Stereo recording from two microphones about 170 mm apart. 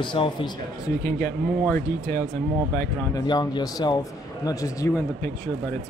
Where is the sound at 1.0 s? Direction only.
10° left (ahead or behind).